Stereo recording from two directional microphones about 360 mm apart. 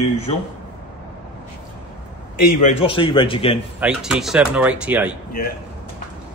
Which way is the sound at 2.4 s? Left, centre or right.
Left.